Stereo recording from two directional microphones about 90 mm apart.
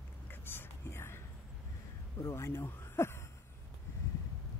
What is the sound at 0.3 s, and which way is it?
Whispering, 25° left (ahead or behind).